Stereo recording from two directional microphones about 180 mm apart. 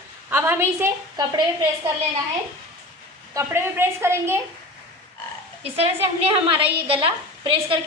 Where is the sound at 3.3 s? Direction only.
15° right (ahead or behind).